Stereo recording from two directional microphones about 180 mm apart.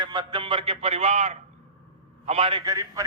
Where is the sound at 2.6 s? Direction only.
20° right (ahead or behind).